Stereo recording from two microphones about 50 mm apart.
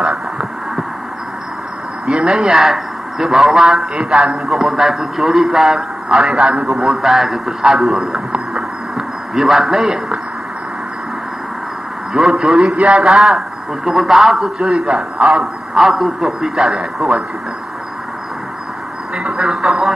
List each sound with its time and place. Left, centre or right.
0.0 s a sound: centre
2.0 s a man's voice: centre
3.9 s a man's voice: centre
8.5 s a sound: centre
12.1 s a man's voice: centre
12.7 s a man's voice: right
13.0 s a man's voice: centre
19.1 s a man's voice: centre